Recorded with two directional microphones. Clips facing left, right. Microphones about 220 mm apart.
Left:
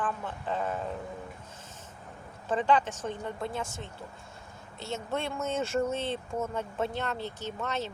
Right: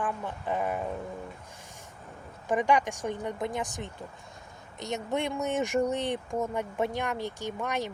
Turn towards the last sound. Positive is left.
turn(degrees=-15)  # may be behind; listen again after turning